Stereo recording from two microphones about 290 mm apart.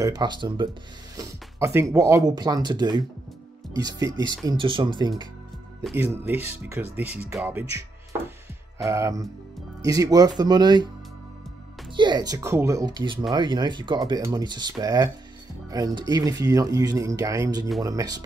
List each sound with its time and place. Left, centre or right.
0.0 s speech: centre
8.7 s speech: centre
11.9 s speech: centre